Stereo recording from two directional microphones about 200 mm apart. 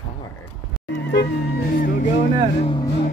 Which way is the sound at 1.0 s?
60° left (ahead or behind).